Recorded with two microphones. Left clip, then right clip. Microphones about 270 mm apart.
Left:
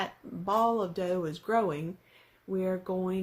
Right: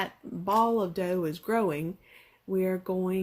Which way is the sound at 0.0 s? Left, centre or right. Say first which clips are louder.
Right 2 dB; right.